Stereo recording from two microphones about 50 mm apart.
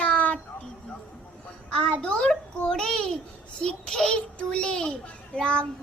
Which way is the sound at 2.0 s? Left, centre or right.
Centre.